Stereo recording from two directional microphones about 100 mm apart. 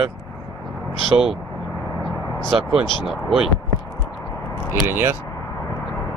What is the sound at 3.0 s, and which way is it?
Speech, 5° right (ahead or behind).